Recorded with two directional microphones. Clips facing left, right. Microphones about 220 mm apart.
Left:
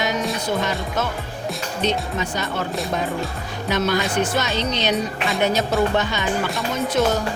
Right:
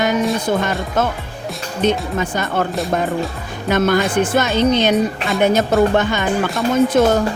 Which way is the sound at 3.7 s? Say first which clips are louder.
Right 6 dB; 50° right (ahead or behind).